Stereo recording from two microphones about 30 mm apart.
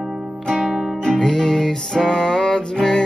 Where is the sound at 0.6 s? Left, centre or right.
Centre.